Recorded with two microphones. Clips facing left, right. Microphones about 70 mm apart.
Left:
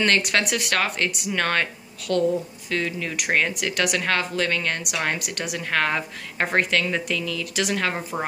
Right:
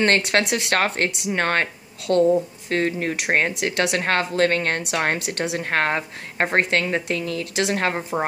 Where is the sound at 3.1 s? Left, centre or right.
Right.